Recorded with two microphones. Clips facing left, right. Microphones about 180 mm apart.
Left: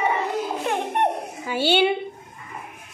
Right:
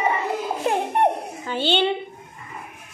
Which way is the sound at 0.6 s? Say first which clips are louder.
Right 4 dB; 35° right (ahead or behind).